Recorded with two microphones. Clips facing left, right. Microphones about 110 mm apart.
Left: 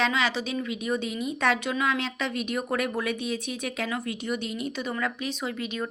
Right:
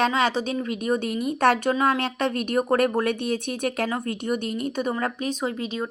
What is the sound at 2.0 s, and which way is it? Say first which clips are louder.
A woman's voice: right 5 dB; 55° right (ahead or behind).